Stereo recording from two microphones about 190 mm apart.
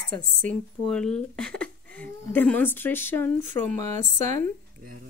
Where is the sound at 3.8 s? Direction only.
40° right (ahead or behind).